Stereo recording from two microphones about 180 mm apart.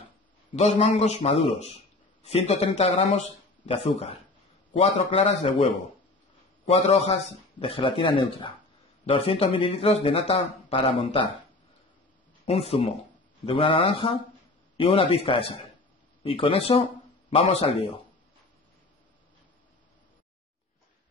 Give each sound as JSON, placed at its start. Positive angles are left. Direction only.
{"t": 0.6, "sound": "a man's voice", "side_deg": 35}
{"t": 12.4, "sound": "a man's voice", "side_deg": 35}